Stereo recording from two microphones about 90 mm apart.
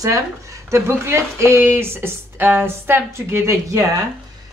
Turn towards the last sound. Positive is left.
turn(degrees=-35)  # may be behind; listen again after turning